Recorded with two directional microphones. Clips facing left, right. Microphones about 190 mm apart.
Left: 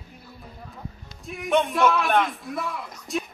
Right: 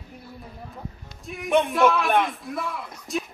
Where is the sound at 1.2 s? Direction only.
Centre (ahead or behind).